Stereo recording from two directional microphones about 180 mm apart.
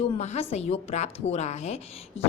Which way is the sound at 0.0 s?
35° left (ahead or behind).